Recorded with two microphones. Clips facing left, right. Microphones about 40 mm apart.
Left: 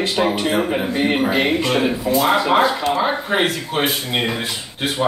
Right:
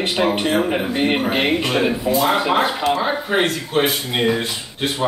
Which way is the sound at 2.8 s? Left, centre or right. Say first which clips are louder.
Even; centre.